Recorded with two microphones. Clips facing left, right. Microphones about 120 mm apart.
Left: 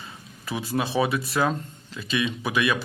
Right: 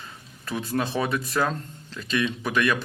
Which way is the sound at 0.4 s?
5° left (ahead or behind).